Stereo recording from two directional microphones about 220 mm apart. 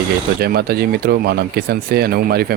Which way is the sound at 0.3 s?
45° right (ahead or behind).